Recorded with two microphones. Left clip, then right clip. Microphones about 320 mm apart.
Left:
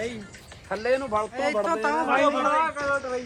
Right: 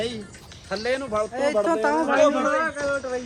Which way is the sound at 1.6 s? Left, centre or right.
Right.